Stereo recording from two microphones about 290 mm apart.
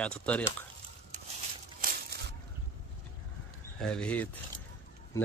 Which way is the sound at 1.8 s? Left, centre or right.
Right.